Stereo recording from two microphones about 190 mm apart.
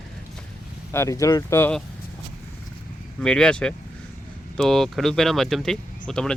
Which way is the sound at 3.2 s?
5° left (ahead or behind).